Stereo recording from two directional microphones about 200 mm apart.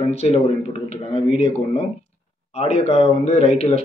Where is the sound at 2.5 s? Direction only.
30° left (ahead or behind).